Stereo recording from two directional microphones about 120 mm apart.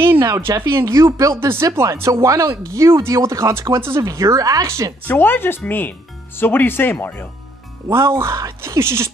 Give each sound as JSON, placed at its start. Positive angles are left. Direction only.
{"t": 0.0, "sound": "speech", "side_deg": -20}
{"t": 5.0, "sound": "speech", "side_deg": 15}
{"t": 7.9, "sound": "speech", "side_deg": -20}